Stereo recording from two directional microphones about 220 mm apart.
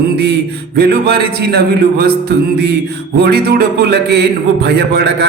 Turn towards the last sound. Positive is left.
turn(degrees=-50)  # may be behind; listen again after turning